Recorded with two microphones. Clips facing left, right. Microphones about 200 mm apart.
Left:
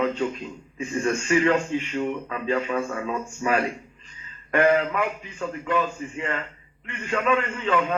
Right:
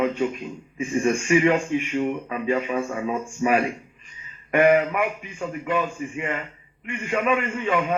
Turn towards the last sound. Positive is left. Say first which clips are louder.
# right 1 dB
turn(degrees=-15)  # may be behind; listen again after turning